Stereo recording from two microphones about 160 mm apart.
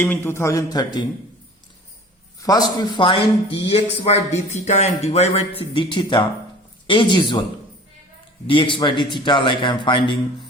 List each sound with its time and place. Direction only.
0.0 s speech: 10° left (ahead or behind)
2.4 s a man's voice: 25° left (ahead or behind)
8.4 s a man's voice: 30° left (ahead or behind)